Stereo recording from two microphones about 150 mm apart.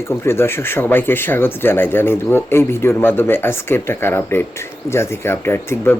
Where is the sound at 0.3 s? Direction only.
15° left (ahead or behind).